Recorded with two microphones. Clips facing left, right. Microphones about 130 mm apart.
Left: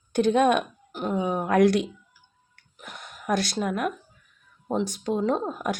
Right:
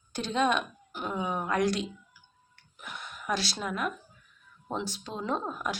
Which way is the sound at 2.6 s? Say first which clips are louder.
Even; 45° left (ahead or behind).